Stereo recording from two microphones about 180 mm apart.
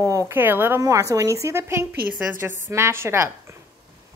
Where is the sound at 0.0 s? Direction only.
20° right (ahead or behind).